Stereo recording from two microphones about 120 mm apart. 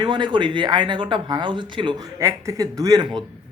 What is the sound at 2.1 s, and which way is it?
Speech, 25° right (ahead or behind).